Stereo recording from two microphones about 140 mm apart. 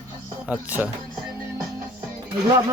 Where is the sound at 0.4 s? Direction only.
10° right (ahead or behind).